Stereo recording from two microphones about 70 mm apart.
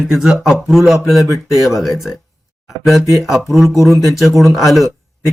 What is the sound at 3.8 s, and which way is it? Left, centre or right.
Speech, centre.